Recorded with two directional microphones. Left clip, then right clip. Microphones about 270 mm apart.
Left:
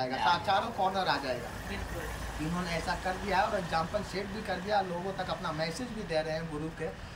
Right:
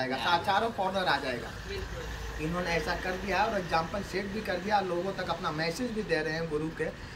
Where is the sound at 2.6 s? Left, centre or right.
Centre.